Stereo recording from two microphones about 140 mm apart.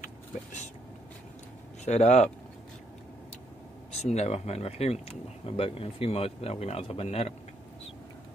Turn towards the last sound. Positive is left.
turn(degrees=45)  # may be behind; listen again after turning